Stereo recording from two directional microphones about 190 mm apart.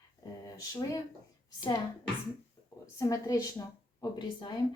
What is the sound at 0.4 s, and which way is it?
Speech, 20° left (ahead or behind).